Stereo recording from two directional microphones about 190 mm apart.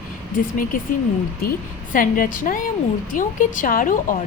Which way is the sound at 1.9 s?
45° left (ahead or behind).